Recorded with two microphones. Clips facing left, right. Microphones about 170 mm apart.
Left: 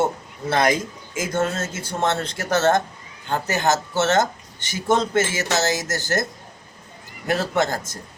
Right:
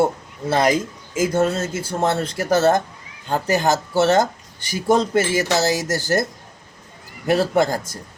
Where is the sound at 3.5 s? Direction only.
35° right (ahead or behind).